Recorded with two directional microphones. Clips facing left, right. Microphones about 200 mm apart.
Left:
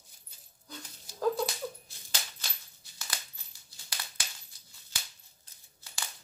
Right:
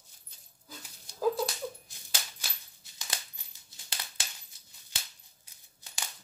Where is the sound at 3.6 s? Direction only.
25° right (ahead or behind).